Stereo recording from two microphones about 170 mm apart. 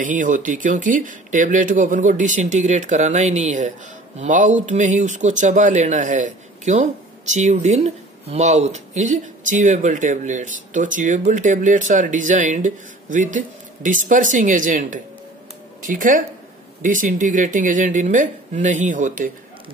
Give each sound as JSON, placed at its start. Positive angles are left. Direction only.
{"t": 0.0, "sound": "speech", "side_deg": -50}